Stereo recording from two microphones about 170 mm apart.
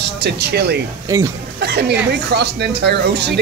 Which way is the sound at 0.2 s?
80° right.